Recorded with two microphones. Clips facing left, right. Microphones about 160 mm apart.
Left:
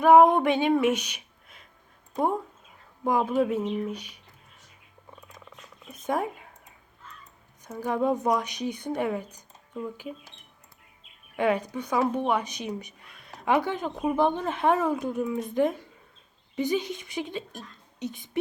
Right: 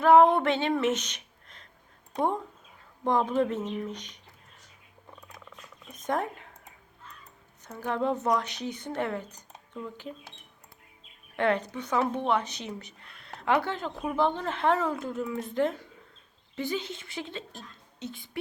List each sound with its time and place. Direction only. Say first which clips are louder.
0.0 s a sound: left 2 dB; 15° left (ahead or behind)
2.1 s speech: left 2 dB; 10° left (ahead or behind)
5.5 s purr: left 1 dB; 10° left (ahead or behind)
7.6 s speech: left 3 dB; 10° left (ahead or behind)
11.3 s speech: left 2 dB; 10° left (ahead or behind)